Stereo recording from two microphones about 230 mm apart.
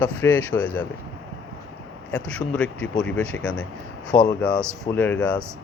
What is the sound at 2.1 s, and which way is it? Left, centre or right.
Speech, centre.